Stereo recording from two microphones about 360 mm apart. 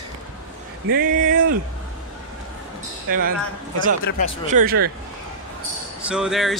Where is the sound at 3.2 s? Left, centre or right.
Right.